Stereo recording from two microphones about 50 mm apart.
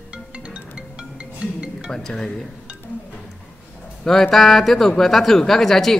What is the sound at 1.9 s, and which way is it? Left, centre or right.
Speech, centre.